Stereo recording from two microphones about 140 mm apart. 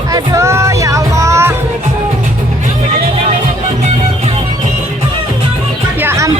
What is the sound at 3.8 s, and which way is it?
Music, 50° right (ahead or behind).